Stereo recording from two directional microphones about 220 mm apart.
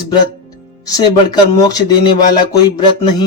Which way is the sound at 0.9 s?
15° left (ahead or behind).